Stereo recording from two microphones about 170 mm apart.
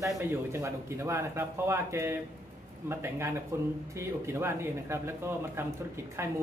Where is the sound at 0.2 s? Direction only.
15° right (ahead or behind).